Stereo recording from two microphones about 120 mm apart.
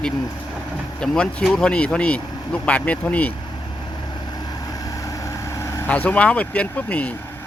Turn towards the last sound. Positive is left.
turn(degrees=10)  # may be behind; listen again after turning